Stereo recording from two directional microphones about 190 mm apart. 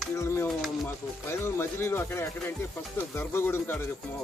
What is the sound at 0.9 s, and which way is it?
Speech, 10° left (ahead or behind).